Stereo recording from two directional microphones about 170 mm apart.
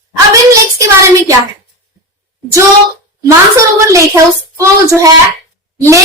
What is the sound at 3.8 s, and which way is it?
A woman's voice, 15° right (ahead or behind).